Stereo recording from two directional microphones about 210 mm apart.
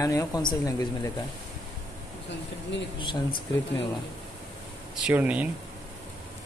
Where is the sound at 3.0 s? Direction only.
25° left (ahead or behind).